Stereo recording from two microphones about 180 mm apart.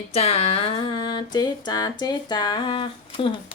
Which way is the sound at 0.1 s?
35° left (ahead or behind).